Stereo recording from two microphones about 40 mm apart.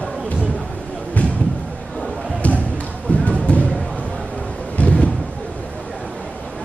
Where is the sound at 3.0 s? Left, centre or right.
Left.